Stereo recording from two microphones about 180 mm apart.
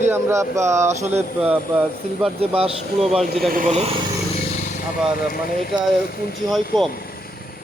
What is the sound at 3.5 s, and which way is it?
Speech, 50° right (ahead or behind).